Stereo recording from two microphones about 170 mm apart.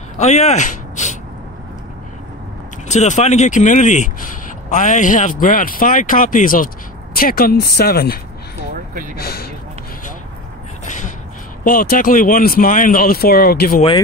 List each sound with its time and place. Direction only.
0.2 s speech: 40° left (ahead or behind)
2.9 s speech: 45° left (ahead or behind); by 9.5 s 65° left (ahead or behind)
11.6 s speech: 60° left (ahead or behind)